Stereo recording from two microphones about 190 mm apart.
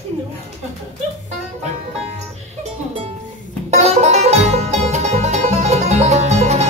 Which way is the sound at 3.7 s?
35° right (ahead or behind).